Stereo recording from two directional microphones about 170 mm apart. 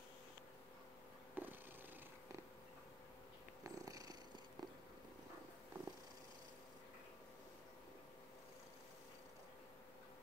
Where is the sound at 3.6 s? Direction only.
20° right (ahead or behind).